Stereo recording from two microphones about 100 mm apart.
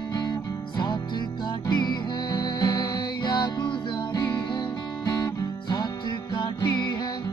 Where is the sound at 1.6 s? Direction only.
50° left (ahead or behind).